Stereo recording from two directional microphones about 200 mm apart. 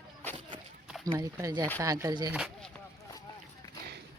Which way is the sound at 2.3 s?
5° right (ahead or behind).